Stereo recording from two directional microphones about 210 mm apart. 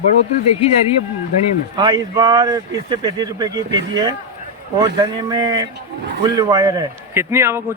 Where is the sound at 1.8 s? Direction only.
20° right (ahead or behind).